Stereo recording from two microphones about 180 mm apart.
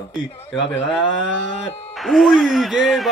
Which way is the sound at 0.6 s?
90° left.